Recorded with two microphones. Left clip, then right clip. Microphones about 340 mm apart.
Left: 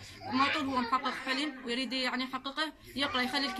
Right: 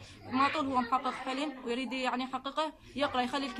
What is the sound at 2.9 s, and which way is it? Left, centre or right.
Speech, centre.